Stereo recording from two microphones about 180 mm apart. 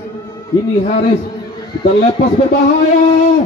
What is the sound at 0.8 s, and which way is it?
Speech, 35° left (ahead or behind).